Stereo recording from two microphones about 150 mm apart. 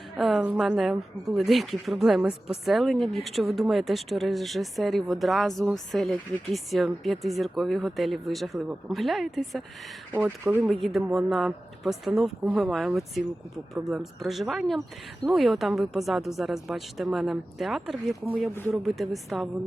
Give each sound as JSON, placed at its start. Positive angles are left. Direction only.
{"t": 0.2, "sound": "a woman's voice", "side_deg": 0}
{"t": 10.2, "sound": "speech", "side_deg": -15}
{"t": 10.6, "sound": "speech", "side_deg": 0}